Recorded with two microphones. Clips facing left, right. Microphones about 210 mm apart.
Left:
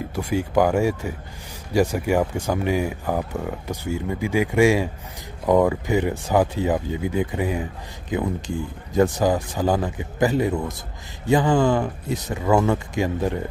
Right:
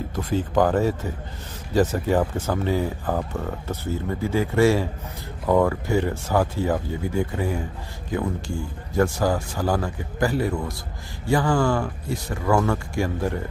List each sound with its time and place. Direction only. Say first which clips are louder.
0.1 s speech: left 2 dB; 10° left (ahead or behind)